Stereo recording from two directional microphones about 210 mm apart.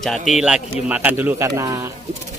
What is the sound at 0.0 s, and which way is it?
Speech, centre (ahead or behind).